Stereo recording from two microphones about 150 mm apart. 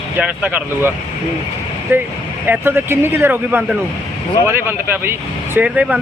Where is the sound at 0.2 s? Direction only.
10° right (ahead or behind).